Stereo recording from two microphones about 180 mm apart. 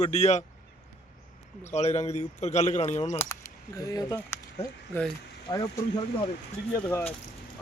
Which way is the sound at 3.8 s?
20° left (ahead or behind).